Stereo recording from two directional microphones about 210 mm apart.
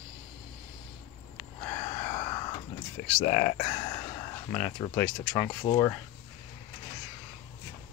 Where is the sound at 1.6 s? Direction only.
20° left (ahead or behind).